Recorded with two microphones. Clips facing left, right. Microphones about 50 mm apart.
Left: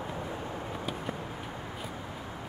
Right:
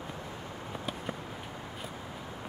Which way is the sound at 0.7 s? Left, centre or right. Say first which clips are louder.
Right 2 dB; centre.